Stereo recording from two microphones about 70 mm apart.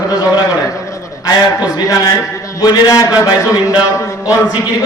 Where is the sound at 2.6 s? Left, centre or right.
Left.